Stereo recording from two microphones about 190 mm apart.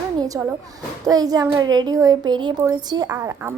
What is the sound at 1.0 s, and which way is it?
A woman's voice, 20° right (ahead or behind).